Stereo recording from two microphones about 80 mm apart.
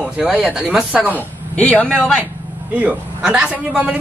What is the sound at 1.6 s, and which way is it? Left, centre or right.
Speech, centre.